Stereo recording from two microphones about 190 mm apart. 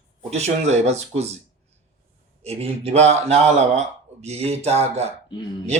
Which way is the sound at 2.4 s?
35° right (ahead or behind).